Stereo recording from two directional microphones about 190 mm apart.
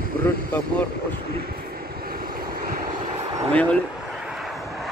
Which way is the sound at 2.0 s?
50° right (ahead or behind).